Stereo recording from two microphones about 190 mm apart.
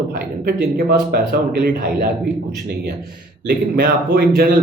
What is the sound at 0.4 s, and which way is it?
Speech, 50° right (ahead or behind).